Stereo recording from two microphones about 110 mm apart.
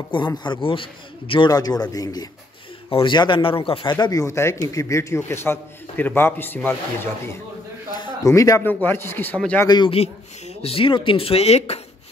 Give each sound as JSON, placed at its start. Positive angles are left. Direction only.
{"t": 0.1, "sound": "a man's voice", "side_deg": 45}
{"t": 1.5, "sound": "speech", "side_deg": 35}
{"t": 2.9, "sound": "a man's voice", "side_deg": 50}
{"t": 4.0, "sound": "a man's voice", "side_deg": 35}
{"t": 7.9, "sound": "a sound", "side_deg": 35}
{"t": 8.6, "sound": "a man's voice", "side_deg": 20}
{"t": 9.8, "sound": "speech", "side_deg": 65}